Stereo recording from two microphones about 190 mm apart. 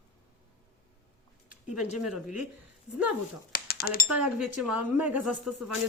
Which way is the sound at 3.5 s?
55° left (ahead or behind).